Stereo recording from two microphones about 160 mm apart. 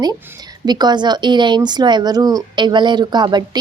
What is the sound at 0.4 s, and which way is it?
A woman's voice, 25° right (ahead or behind).